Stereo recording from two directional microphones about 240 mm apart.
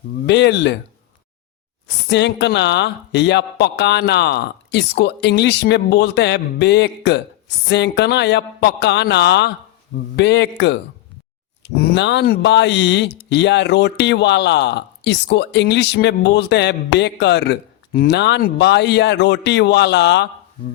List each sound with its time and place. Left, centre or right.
0.3 s speech: left
2.0 s speech: left